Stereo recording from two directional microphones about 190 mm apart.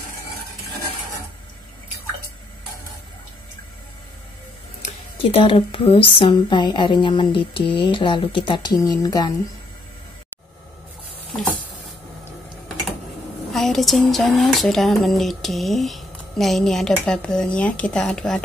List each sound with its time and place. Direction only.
4.8 s speech: 30° left (ahead or behind)
13.5 s speech: centre (ahead or behind)